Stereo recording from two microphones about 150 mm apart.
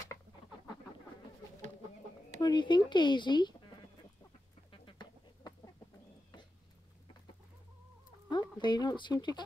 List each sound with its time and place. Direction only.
2.4 s speech: 30° left (ahead or behind)
4.6 s duck: 30° left (ahead or behind)
8.3 s speech: 30° left (ahead or behind)